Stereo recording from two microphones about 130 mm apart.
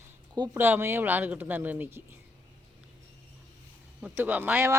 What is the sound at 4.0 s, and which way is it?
Speech, 10° right (ahead or behind).